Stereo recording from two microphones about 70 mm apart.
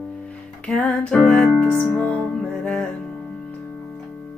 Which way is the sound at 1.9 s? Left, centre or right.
Left.